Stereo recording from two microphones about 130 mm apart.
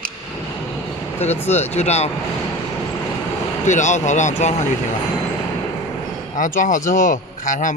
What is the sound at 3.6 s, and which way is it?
Speech, 65° left (ahead or behind).